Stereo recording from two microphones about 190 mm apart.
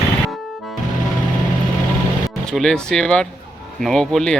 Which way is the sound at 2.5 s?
5° left (ahead or behind).